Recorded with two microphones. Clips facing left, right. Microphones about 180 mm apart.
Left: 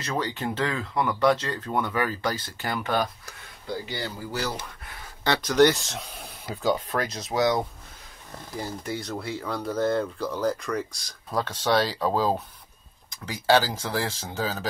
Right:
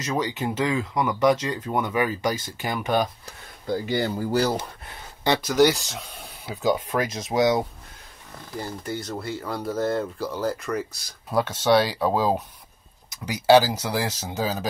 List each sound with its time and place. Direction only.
0.0 s speech: 10° right (ahead or behind)
3.6 s speech: 45° right (ahead or behind)
4.6 s speech: 25° right (ahead or behind)
5.2 s speech: 15° right (ahead or behind)
5.5 s speech: centre (ahead or behind); by 7.6 s 20° right (ahead or behind)
8.5 s speech: centre (ahead or behind); by 14.7 s 15° right (ahead or behind)